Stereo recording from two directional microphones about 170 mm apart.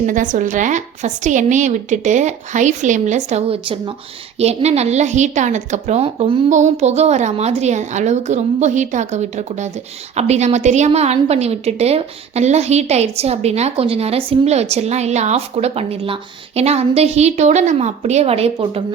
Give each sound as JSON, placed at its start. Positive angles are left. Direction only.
{"t": 0.0, "sound": "a woman's voice", "side_deg": -50}